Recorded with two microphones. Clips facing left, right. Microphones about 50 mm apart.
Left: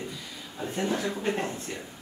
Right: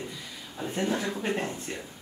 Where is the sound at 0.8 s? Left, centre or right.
Centre.